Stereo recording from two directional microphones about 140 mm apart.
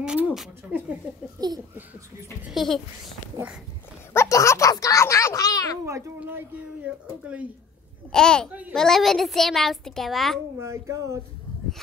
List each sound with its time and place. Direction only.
0.0 s speech: 5° right (ahead or behind)
1.4 s speech: 25° right (ahead or behind)
2.5 s a child's voice: centre (ahead or behind)
4.1 s speech: 20° left (ahead or behind)
6.1 s a sound: 10° right (ahead or behind)
8.1 s a child's voice: 5° left (ahead or behind)
8.5 s a child's voice: 10° right (ahead or behind)
8.7 s a child's voice: 5° left (ahead or behind)
10.6 s speech: 20° right (ahead or behind)